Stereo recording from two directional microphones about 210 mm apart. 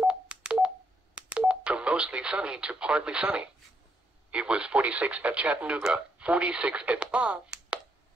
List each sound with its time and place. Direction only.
0.0 s telephone dialing: 5° right (ahead or behind)
1.1 s speech: 5° right (ahead or behind)